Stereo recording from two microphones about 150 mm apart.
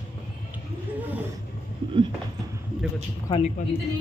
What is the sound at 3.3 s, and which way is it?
Speech, 30° left (ahead or behind).